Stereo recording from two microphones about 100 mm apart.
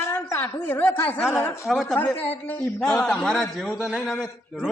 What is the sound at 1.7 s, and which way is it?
Speech, centre (ahead or behind).